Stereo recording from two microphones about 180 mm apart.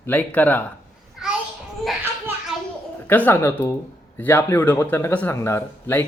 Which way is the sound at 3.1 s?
10° left (ahead or behind).